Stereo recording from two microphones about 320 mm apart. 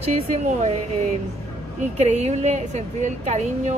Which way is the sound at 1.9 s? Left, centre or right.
Right.